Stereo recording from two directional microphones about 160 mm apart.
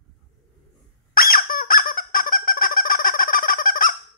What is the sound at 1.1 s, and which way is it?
Squeak, 65° left (ahead or behind).